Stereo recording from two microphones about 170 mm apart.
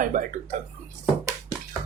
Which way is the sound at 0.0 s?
55° right (ahead or behind).